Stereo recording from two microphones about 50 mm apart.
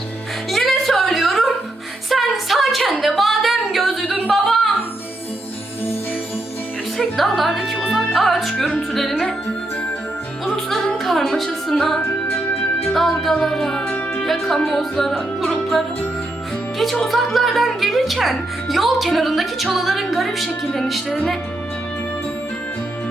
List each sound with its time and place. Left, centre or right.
0.5 s a sound: centre
2.0 s music: centre
3.0 s a sound: centre
7.2 s music: centre
8.9 s speech: centre
10.5 s music: centre
11.3 s speech: centre
13.8 s music: left
14.3 s speech: centre
16.7 s speech: centre